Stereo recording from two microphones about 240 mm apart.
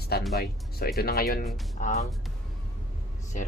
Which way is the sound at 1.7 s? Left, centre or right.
Left.